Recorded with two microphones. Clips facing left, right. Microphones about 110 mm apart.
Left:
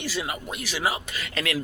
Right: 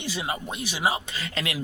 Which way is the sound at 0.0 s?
20° right (ahead or behind).